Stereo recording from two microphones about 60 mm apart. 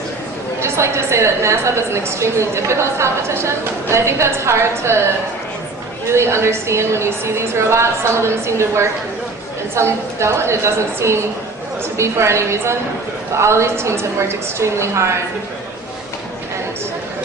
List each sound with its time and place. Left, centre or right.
0.6 s a woman's voice: right
6.1 s a woman's voice: right